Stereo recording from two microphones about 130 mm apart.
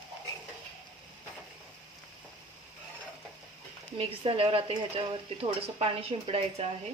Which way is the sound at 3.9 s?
45° right (ahead or behind).